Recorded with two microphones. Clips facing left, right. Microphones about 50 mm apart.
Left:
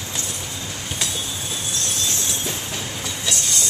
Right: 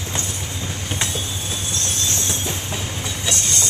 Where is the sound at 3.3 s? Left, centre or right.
Right.